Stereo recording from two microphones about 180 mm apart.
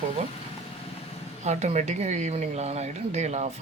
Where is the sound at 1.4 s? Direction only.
40° right (ahead or behind).